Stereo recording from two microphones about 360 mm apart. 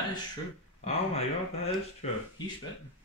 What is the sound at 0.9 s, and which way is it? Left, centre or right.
Speech, centre.